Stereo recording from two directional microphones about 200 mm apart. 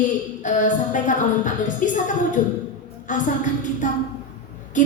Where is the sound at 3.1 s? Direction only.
40° left (ahead or behind).